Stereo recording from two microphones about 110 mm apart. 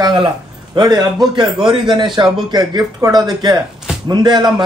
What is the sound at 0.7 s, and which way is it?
A man's voice, 40° right (ahead or behind).